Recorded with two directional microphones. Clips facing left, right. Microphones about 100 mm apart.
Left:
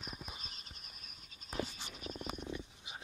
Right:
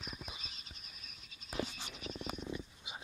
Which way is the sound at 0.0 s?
50° left (ahead or behind).